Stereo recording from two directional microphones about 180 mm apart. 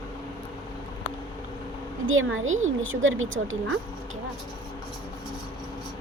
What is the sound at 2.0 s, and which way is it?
Speech, 90° right.